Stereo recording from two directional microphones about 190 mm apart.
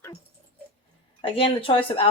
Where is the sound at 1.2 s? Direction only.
30° left (ahead or behind).